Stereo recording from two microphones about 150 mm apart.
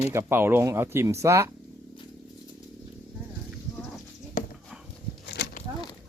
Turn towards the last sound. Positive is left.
turn(degrees=90)